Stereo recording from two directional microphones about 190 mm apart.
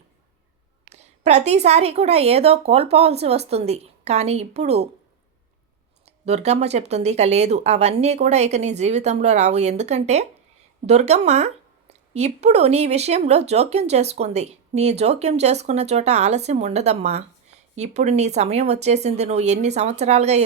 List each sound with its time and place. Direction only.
0.9 s speech: 35° right (ahead or behind)
6.1 s speech: 35° right (ahead or behind)